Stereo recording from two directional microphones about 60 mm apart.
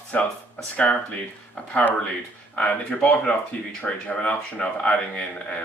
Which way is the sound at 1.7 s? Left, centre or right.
Left.